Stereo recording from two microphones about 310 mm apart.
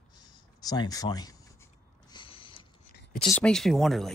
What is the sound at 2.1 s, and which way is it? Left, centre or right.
Mechanisms, centre.